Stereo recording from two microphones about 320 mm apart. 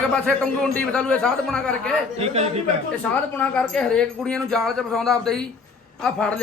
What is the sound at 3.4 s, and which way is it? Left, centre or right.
A man's voice, centre.